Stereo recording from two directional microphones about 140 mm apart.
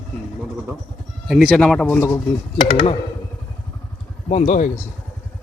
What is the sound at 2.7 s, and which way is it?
Speech, 35° left (ahead or behind).